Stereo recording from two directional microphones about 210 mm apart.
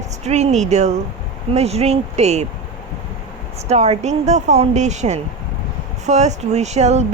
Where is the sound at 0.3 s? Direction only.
30° right (ahead or behind).